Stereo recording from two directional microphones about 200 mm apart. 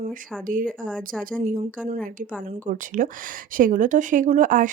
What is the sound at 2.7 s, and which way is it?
A woman's voice, 40° right (ahead or behind).